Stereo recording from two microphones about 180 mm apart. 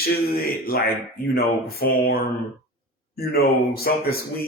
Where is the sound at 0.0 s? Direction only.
55° left (ahead or behind).